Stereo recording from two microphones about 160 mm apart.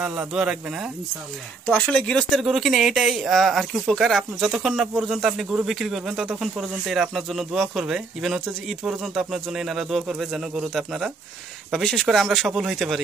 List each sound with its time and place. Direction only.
0.0 s speech: 5° right (ahead or behind)
1.7 s speech: 10° left (ahead or behind)